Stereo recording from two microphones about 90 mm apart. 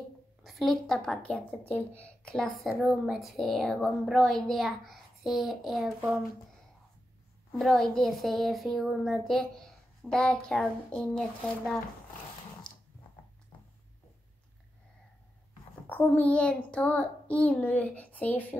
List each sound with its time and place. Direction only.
0.4 s a woman's voice: centre (ahead or behind); by 2.3 s 20° left (ahead or behind)
2.3 s a woman's voice: 5° left (ahead or behind)
7.5 s a woman's voice: centre (ahead or behind)
15.9 s child singing: 20° left (ahead or behind)